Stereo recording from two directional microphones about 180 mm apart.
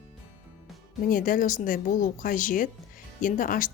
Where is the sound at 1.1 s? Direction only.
50° left (ahead or behind).